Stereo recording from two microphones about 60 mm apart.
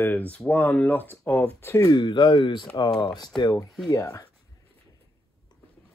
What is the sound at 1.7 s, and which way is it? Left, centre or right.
Speech, left.